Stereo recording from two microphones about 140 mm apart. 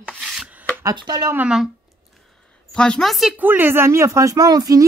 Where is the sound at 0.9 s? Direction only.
30° right (ahead or behind).